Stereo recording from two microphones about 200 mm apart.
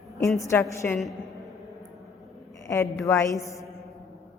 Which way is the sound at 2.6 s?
15° left (ahead or behind).